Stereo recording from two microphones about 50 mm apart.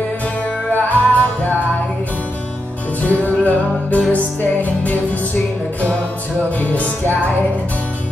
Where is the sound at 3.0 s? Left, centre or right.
Left.